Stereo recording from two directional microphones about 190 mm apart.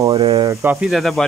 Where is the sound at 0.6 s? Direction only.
10° right (ahead or behind).